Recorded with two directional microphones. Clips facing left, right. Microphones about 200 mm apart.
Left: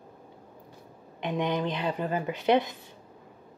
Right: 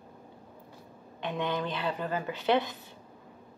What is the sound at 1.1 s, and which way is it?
Speech, 15° left (ahead or behind).